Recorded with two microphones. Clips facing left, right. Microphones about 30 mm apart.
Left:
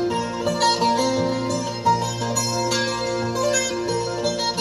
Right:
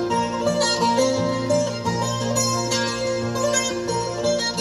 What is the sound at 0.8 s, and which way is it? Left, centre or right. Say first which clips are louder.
Music: right 1 dB; centre.